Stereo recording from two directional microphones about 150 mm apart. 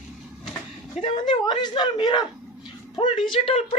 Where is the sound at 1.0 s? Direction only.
35° left (ahead or behind).